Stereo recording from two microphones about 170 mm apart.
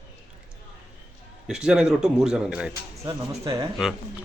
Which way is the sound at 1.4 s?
5° right (ahead or behind).